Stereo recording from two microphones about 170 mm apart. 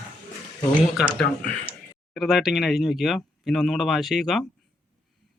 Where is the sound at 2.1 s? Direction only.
Centre (ahead or behind).